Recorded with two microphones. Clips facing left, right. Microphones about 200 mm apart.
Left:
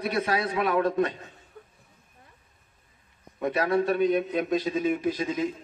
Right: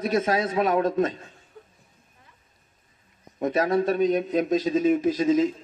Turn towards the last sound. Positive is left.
turn(degrees=-40)  # may be behind; listen again after turning